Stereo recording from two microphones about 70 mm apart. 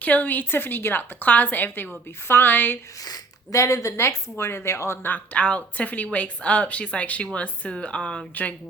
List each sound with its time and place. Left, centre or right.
0.0 s speech: left
3.5 s speech: left
5.0 s speech: left